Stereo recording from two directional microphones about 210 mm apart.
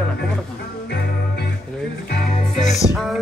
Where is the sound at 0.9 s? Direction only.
50° left (ahead or behind).